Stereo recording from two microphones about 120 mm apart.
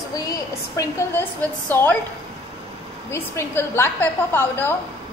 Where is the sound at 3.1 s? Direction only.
20° left (ahead or behind).